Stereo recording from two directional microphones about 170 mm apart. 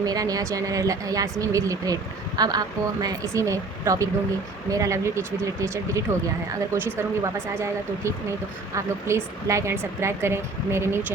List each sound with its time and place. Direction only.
0.0 s speech: 20° right (ahead or behind)